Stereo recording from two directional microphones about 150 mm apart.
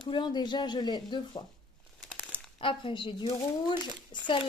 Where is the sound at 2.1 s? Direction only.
5° right (ahead or behind).